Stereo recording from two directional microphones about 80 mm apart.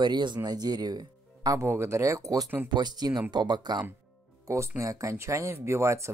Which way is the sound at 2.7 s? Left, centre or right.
Right.